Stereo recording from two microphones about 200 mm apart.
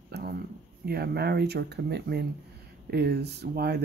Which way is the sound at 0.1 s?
50° right (ahead or behind).